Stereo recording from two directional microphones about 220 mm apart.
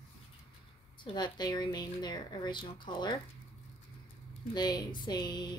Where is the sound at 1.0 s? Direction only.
20° left (ahead or behind).